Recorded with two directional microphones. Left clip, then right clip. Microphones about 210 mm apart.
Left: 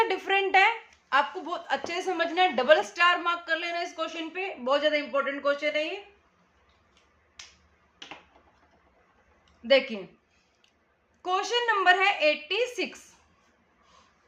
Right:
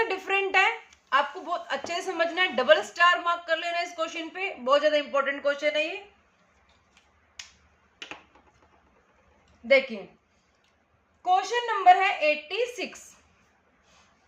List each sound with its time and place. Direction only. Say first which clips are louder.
0.0 s a woman's voice: left 1 dB; 10° left (ahead or behind)
9.6 s a woman's voice: right 1 dB; 30° left (ahead or behind)
11.2 s a woman's voice: right 3 dB; 35° left (ahead or behind)